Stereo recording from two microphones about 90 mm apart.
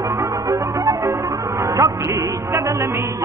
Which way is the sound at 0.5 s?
35° right (ahead or behind).